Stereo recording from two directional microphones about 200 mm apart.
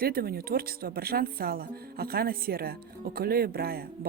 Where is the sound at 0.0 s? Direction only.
50° right (ahead or behind).